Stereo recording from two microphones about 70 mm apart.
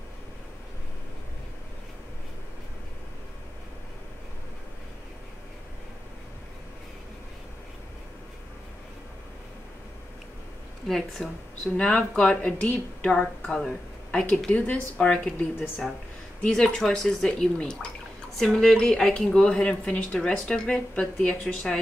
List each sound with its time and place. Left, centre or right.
10.9 s speech: centre